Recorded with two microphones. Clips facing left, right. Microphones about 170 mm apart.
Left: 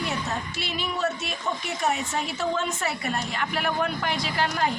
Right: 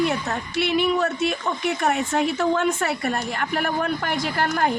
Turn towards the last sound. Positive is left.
turn(degrees=-50)  # may be behind; listen again after turning